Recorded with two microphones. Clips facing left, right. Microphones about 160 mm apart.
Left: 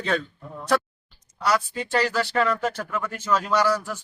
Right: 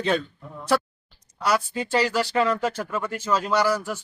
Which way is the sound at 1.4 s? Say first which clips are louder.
Even; 10° right (ahead or behind).